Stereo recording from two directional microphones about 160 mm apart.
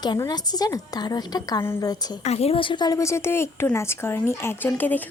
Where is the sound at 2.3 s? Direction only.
40° left (ahead or behind); by 5.0 s 10° left (ahead or behind).